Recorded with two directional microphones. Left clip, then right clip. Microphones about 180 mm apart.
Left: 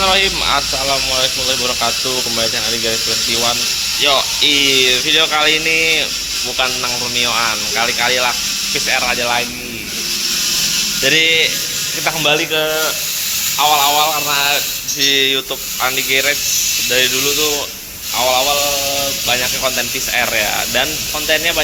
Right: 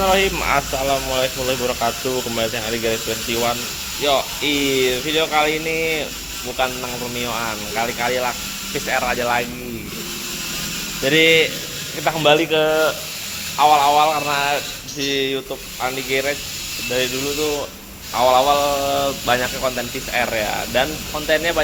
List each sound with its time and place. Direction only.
0.0 s speech: 25° right (ahead or behind)
4.0 s speech: 15° right (ahead or behind)
7.2 s speech: 10° right (ahead or behind)
11.0 s speech: 15° right (ahead or behind)
15.0 s speech: 15° right (ahead or behind)
18.2 s mantra: 40° right (ahead or behind)
19.3 s speech: 25° right (ahead or behind)
20.1 s speech: 15° right (ahead or behind)
21.2 s speech: 25° right (ahead or behind)